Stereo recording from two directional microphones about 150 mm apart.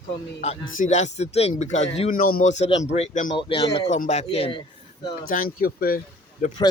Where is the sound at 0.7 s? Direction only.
55° left (ahead or behind).